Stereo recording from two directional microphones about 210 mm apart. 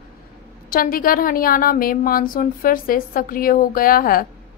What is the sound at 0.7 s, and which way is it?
A woman's voice, 45° left (ahead or behind).